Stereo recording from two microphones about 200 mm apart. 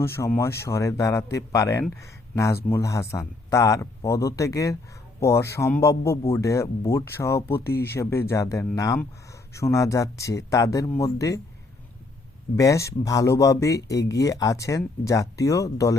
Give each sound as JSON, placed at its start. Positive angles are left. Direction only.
{"t": 0.0, "sound": "speech", "side_deg": 10}
{"t": 7.6, "sound": "speech", "side_deg": 50}
{"t": 7.9, "sound": "speech", "side_deg": 15}
{"t": 12.5, "sound": "speech", "side_deg": 15}